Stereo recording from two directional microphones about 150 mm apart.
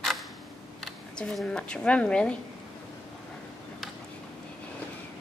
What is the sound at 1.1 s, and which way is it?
A woman's voice, 5° left (ahead or behind).